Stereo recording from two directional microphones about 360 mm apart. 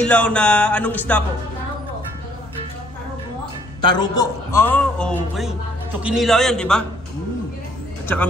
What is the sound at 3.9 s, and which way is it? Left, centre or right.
A man's voice, centre.